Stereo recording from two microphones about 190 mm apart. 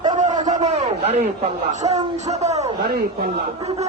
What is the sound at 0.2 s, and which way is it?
A man's voice, 40° right (ahead or behind).